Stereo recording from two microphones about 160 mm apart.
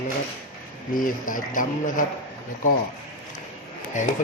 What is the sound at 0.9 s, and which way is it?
Speech, 60° left (ahead or behind).